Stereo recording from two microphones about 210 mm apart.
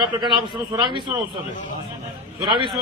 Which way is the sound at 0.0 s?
20° right (ahead or behind).